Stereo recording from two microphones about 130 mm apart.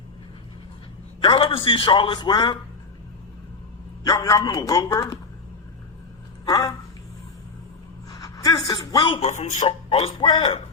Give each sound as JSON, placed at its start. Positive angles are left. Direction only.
{"t": 1.2, "sound": "a man's voice", "side_deg": 40}
{"t": 4.0, "sound": "speech", "side_deg": 30}
{"t": 6.4, "sound": "a sound", "side_deg": 30}
{"t": 8.1, "sound": "a woman's voice", "side_deg": 30}
{"t": 9.2, "sound": "speech", "side_deg": 65}
{"t": 9.6, "sound": "speech", "side_deg": 50}